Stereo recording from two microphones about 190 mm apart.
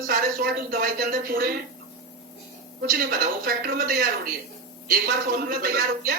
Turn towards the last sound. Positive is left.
turn(degrees=-50)  # may be behind; listen again after turning